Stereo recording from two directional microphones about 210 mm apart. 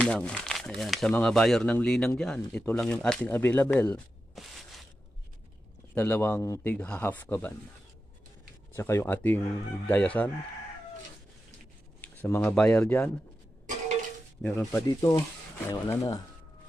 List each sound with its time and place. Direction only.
0.0 s speech: 5° left (ahead or behind)
5.9 s speech: 10° left (ahead or behind)
8.7 s speech: 10° left (ahead or behind)
12.0 s speech: 10° left (ahead or behind)
14.4 s speech: 5° left (ahead or behind)